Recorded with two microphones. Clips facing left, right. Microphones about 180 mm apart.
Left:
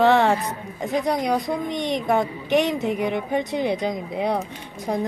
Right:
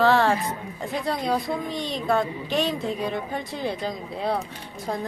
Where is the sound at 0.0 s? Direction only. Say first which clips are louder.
Left 2 dB; 20° left (ahead or behind).